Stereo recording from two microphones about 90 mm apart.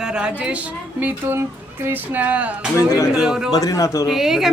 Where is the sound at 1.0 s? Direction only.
25° right (ahead or behind); by 3.5 s 10° right (ahead or behind).